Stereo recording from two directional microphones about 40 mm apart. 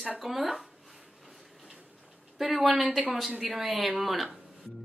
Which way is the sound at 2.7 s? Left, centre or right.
Centre.